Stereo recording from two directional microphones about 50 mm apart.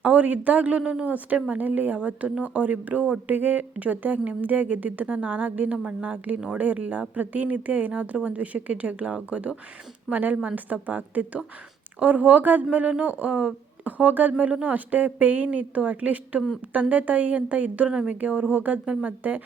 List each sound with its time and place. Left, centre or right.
0.0 s speech: right
0.8 s a woman's voice: centre
1.0 s speech: right
5.7 s a woman's voice: right
10.1 s speech: right